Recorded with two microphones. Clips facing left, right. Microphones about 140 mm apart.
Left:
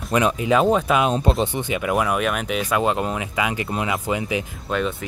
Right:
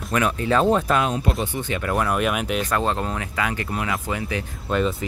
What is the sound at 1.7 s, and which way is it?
Speech, 10° left (ahead or behind).